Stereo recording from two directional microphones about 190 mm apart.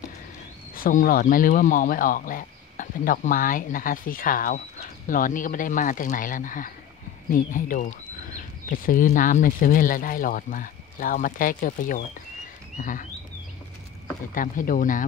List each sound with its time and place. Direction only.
0.7 s speech: 50° left (ahead or behind)
12.7 s bird: 45° left (ahead or behind)
14.3 s speech: 45° left (ahead or behind)